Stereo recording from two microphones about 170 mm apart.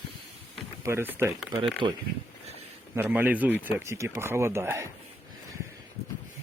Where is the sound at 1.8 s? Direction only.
30° right (ahead or behind).